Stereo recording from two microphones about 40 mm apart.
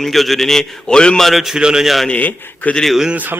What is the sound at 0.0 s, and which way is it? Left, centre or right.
A man's voice, centre.